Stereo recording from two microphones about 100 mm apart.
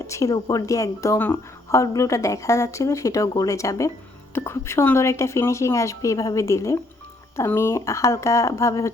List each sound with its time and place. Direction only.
0.1 s speech: 30° left (ahead or behind)
0.3 s speech: 45° left (ahead or behind)
0.6 s a woman's voice: 35° left (ahead or behind)